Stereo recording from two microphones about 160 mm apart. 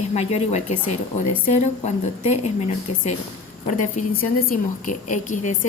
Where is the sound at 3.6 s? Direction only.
50° left (ahead or behind).